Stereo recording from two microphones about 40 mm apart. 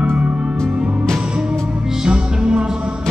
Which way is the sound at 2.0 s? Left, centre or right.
Right.